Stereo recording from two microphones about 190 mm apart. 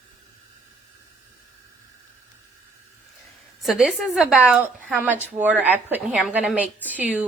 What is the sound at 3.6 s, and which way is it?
A woman's voice, centre (ahead or behind).